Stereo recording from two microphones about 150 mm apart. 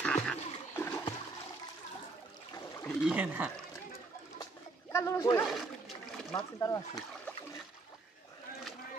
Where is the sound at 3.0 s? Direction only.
10° right (ahead or behind).